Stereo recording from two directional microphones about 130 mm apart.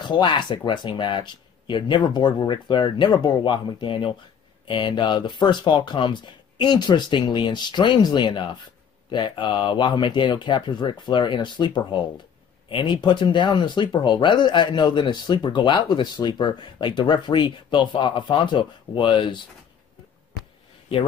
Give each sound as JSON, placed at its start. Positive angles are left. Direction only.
{"t": 0.0, "sound": "speech", "side_deg": 35}